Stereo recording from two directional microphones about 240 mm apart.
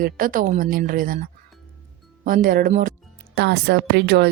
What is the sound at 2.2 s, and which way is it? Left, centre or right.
Speech, right.